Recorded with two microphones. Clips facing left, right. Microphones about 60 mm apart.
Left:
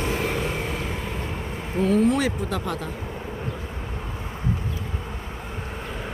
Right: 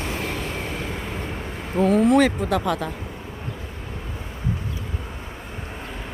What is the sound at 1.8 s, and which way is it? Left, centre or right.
Speech, right.